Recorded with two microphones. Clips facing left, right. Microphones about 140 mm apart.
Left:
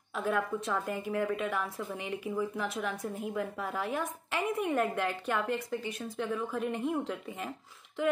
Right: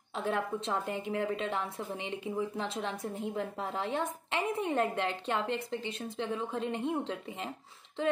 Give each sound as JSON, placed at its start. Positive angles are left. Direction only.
{"t": 0.1, "sound": "a woman's voice", "side_deg": -25}